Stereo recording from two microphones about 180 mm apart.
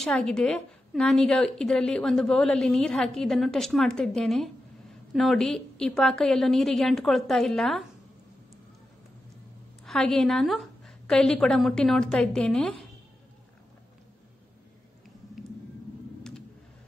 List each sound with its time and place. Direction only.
0.0 s a woman's voice: 5° left (ahead or behind)
9.8 s a woman's voice: 5° left (ahead or behind)